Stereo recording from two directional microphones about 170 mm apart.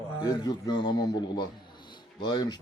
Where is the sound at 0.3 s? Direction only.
25° left (ahead or behind).